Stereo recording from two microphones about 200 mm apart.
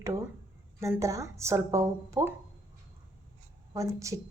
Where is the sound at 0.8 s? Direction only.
15° right (ahead or behind).